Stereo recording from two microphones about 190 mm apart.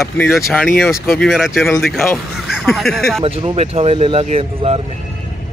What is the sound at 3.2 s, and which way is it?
Speech, 30° right (ahead or behind).